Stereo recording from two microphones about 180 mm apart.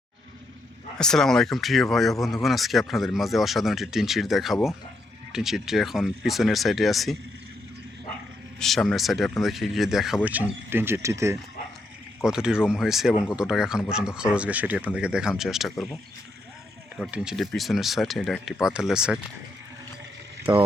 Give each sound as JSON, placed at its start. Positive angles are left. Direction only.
{"t": 0.9, "sound": "speech", "side_deg": 5}
{"t": 8.5, "sound": "speech", "side_deg": 0}
{"t": 12.2, "sound": "speech", "side_deg": -5}
{"t": 17.0, "sound": "speech", "side_deg": -5}
{"t": 20.4, "sound": "speech", "side_deg": -30}